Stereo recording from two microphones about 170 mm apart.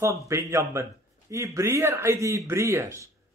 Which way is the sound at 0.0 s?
15° right (ahead or behind).